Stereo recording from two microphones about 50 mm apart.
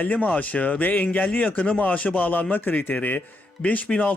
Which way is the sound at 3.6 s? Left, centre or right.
Left.